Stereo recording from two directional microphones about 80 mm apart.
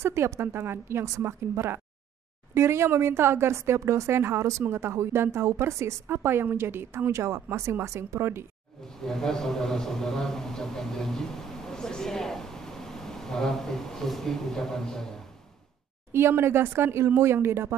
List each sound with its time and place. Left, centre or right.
0.0 s a woman's voice: right
8.8 s a man's voice: centre
16.1 s a woman's voice: right